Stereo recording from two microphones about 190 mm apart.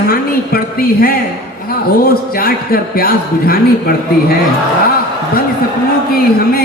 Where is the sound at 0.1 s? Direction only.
50° left (ahead or behind).